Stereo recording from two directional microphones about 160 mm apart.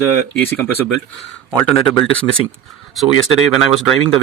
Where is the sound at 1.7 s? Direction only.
Centre (ahead or behind).